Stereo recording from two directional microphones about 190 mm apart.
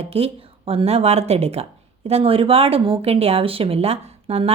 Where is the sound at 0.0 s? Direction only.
30° right (ahead or behind).